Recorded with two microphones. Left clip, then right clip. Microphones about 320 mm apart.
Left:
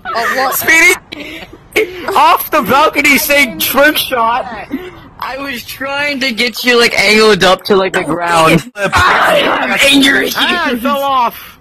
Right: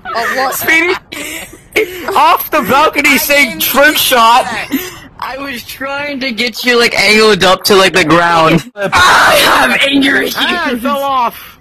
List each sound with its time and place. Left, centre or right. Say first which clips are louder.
0.1 s speech: even; centre
1.7 s speech: even; centre
4.1 s speech: right 6 dB; right
5.2 s speech: even; centre
6.0 s speech: left 3 dB; centre
6.9 s speech: even; centre
7.6 s speech: right 4 dB; right
8.3 s speech: even; centre
8.9 s a sound: right 3 dB; right
9.8 s speech: left 3 dB; centre
10.1 s speech: even; centre